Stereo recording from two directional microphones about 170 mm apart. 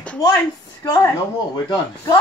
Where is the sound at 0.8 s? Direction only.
15° left (ahead or behind).